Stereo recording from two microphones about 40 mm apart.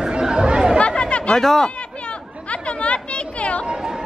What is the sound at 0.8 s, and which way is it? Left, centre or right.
Chatter, left.